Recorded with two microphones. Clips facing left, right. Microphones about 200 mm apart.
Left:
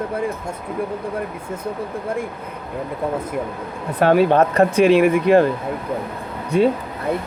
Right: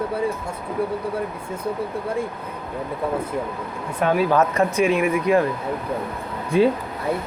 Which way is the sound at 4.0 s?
65° left (ahead or behind).